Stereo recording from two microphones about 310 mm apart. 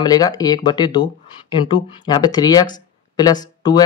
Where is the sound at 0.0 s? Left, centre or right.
Centre.